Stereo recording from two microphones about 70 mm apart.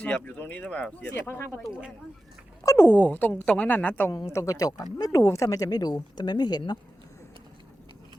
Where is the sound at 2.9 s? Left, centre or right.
Left.